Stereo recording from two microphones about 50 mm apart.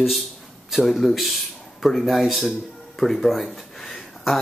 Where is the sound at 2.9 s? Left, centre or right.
Centre.